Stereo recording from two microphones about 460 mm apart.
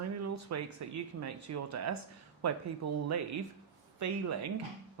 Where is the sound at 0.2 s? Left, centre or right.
Right.